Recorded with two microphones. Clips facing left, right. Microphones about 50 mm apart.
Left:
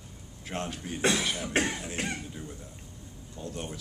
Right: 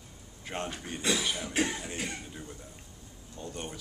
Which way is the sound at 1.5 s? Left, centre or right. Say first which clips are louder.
Left 2 dB; left.